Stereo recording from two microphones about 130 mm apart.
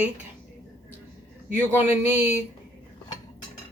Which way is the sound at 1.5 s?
15° right (ahead or behind).